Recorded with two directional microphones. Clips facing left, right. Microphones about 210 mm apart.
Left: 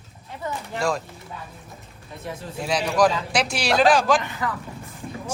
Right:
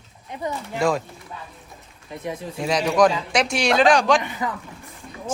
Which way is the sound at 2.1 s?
15° right (ahead or behind).